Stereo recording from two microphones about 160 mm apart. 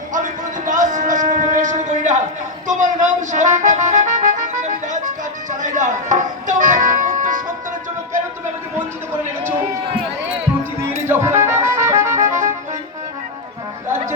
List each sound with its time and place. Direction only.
0.1 s a sound: 55° right (ahead or behind)
2.6 s music: 50° right (ahead or behind)
10.8 s music: 15° right (ahead or behind)